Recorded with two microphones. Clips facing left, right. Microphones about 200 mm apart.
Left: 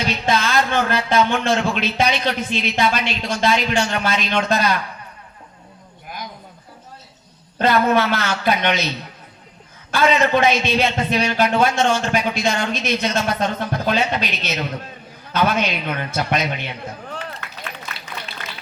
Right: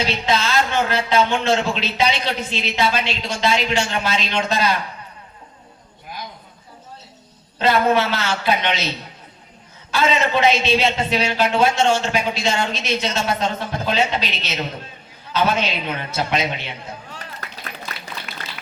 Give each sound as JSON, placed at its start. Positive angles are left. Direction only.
{"t": 0.0, "sound": "speech", "side_deg": 50}
{"t": 7.6, "sound": "speech", "side_deg": 50}
{"t": 9.9, "sound": "speech", "side_deg": 50}
{"t": 17.2, "sound": "run", "side_deg": -40}